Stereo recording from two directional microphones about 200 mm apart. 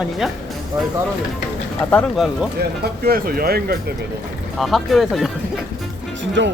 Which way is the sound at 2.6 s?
50° right (ahead or behind).